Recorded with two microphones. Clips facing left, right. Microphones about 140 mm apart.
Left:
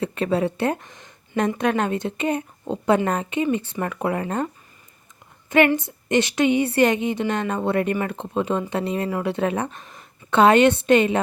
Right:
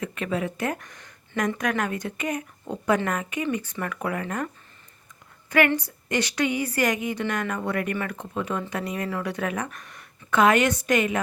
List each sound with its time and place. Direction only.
0.0 s a woman's voice: 30° left (ahead or behind)
5.5 s a woman's voice: 20° left (ahead or behind)